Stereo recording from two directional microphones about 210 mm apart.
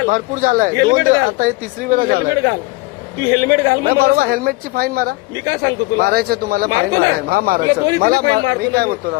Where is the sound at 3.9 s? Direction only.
45° right (ahead or behind).